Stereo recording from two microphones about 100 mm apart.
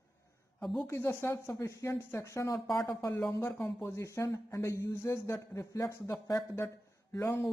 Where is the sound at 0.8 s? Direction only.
25° left (ahead or behind).